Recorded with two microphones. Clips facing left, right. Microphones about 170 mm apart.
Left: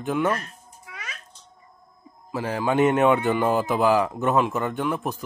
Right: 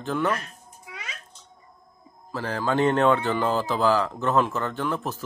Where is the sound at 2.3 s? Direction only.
15° left (ahead or behind).